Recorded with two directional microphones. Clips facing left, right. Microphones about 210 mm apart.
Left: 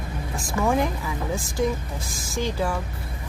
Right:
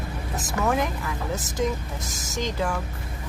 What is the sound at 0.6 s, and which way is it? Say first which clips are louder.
Speech: left 2 dB; 10° left (ahead or behind).